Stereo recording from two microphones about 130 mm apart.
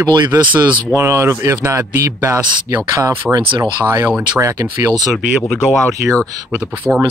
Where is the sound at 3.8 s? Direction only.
20° right (ahead or behind).